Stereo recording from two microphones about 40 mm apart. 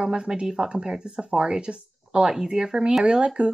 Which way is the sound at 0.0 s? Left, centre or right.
Right.